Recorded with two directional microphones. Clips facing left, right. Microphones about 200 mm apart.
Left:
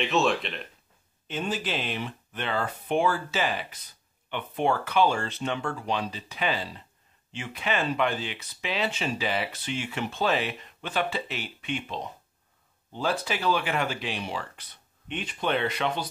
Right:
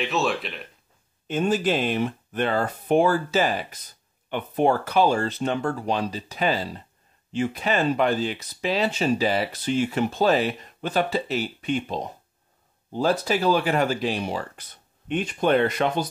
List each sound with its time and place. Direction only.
0.0 s speech: centre (ahead or behind)
1.2 s speech: 45° right (ahead or behind)